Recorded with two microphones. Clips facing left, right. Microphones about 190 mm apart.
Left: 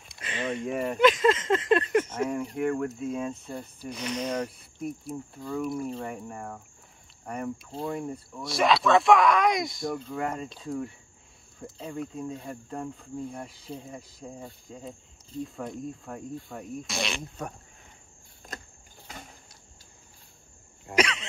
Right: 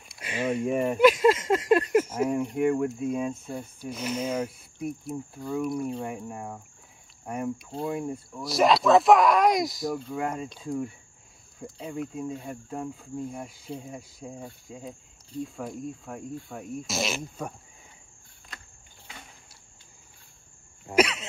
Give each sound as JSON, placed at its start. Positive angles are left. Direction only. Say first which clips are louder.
{"t": 0.2, "sound": "speech", "louder": "right 4 dB", "side_deg": -10}
{"t": 18.5, "sound": "vehicle", "louder": "left 6 dB", "side_deg": 40}
{"t": 20.8, "sound": "throat clearing", "louder": "right 3 dB", "side_deg": -5}